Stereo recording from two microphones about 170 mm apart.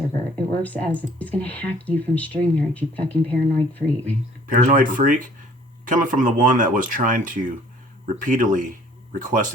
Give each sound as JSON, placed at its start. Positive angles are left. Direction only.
{"t": 0.6, "sound": "speech", "side_deg": 10}
{"t": 4.4, "sound": "speech", "side_deg": -50}